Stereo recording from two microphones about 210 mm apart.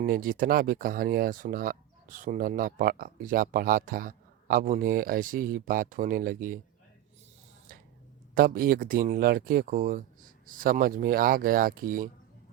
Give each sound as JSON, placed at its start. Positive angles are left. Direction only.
{"t": 0.0, "sound": "speech", "side_deg": -40}
{"t": 8.4, "sound": "speech", "side_deg": -45}